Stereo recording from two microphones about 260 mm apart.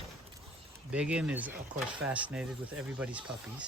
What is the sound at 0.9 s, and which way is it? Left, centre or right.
Speech, centre.